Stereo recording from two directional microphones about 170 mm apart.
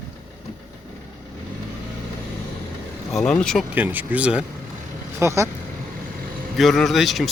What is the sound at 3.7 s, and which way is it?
Speech, 10° right (ahead or behind).